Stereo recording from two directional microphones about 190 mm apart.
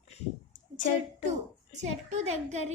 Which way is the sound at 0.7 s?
40° left (ahead or behind).